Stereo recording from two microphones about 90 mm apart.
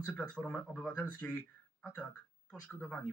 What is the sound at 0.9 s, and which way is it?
Speech, 20° left (ahead or behind).